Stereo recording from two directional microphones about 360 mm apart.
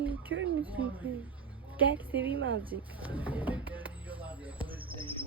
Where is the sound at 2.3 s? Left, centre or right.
Right.